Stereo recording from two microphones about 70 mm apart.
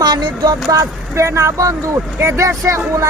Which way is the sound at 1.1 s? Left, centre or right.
Right.